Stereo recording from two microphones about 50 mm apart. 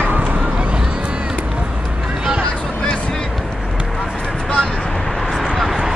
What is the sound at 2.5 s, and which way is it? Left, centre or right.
Vehicle, left.